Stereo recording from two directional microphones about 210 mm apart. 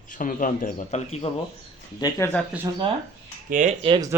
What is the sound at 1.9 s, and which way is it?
Speech, 20° left (ahead or behind).